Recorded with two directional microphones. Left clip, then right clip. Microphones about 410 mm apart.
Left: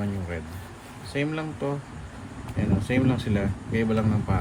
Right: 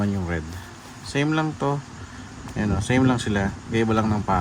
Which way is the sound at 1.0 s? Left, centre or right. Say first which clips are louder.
Right 6 dB; centre.